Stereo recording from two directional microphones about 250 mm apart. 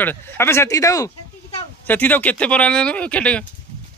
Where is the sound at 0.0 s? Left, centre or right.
Centre.